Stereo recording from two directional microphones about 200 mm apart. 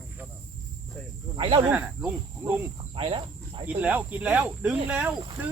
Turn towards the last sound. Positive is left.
turn(degrees=-5)  # may be behind; listen again after turning